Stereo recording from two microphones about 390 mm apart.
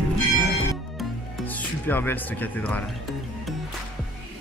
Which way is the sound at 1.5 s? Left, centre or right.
Centre.